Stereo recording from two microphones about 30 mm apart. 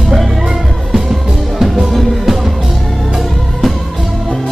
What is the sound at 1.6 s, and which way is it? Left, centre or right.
Music, centre.